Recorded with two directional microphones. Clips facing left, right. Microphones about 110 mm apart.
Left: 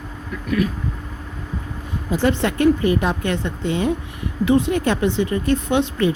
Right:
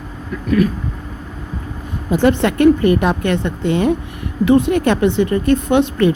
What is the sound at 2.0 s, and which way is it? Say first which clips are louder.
Speech: right 5 dB; 60° right (ahead or behind).